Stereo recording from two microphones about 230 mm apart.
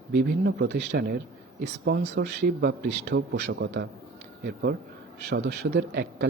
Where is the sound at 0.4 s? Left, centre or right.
Right.